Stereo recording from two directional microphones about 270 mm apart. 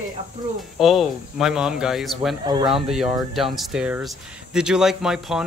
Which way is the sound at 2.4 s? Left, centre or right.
Centre.